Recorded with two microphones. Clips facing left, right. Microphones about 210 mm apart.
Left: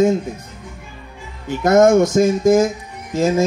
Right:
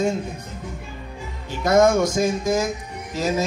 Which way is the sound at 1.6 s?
50° left (ahead or behind).